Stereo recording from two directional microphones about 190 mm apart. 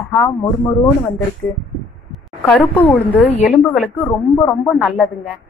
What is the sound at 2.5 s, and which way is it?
Speech, 10° left (ahead or behind).